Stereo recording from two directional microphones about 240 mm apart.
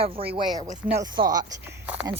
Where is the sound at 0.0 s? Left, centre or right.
Right.